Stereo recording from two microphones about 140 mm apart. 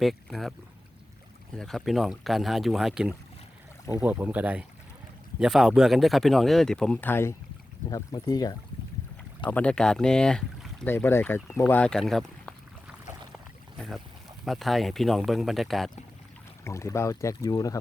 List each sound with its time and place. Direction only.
0.0 s speech: centre (ahead or behind)
1.5 s speech: centre (ahead or behind)
7.9 s speech: 25° left (ahead or behind)
9.5 s speech: 10° left (ahead or behind)
10.8 s speech: 15° left (ahead or behind)
13.7 s boat: centre (ahead or behind)
14.4 s speech: centre (ahead or behind)
16.6 s speech: 20° left (ahead or behind)